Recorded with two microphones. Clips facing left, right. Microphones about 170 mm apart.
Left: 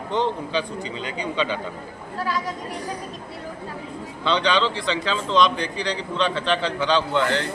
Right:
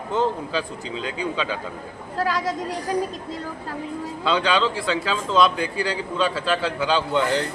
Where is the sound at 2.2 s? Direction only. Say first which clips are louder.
Right 3 dB; 90° right.